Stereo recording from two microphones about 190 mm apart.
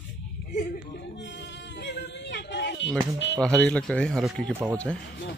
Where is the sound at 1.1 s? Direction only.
70° left (ahead or behind).